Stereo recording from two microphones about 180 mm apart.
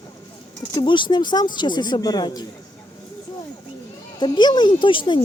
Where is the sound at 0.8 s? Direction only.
25° left (ahead or behind).